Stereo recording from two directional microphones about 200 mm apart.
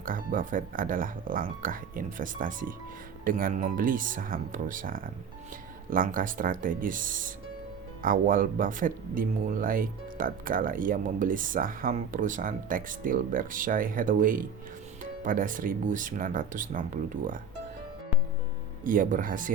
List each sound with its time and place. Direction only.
0.0 s speech: 45° right (ahead or behind)
18.9 s speech: 40° right (ahead or behind)